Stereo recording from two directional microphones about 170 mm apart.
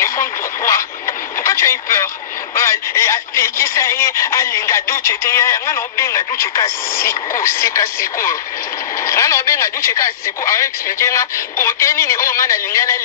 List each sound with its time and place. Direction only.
0.0 s radio: 20° left (ahead or behind)
2.5 s speech: 15° left (ahead or behind)